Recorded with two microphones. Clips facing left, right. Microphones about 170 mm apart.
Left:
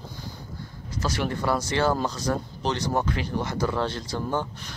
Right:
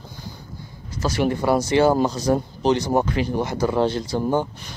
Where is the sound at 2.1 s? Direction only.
25° right (ahead or behind).